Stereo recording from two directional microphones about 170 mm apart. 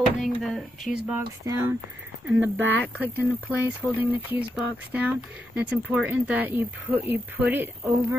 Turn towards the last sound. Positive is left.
turn(degrees=-10)  # may be behind; listen again after turning